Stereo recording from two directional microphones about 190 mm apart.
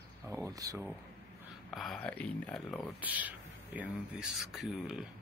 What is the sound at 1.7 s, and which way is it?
Speech, centre (ahead or behind).